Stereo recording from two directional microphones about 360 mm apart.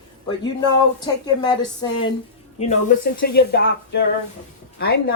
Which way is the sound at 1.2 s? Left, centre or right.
Centre.